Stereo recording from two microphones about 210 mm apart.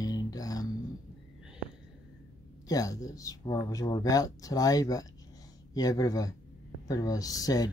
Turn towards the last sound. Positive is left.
turn(degrees=15)  # may be behind; listen again after turning